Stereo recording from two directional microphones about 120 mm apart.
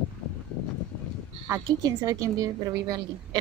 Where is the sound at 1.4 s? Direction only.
30° right (ahead or behind).